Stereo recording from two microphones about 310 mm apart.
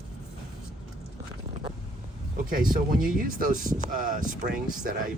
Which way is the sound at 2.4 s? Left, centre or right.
Right.